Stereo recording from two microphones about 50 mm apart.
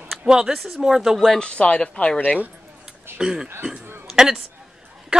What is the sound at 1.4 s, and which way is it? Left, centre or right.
Speech, left.